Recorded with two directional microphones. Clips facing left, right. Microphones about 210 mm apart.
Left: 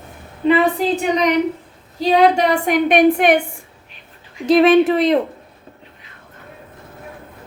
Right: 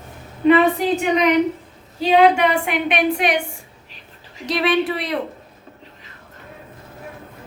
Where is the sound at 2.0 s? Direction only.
40° left (ahead or behind).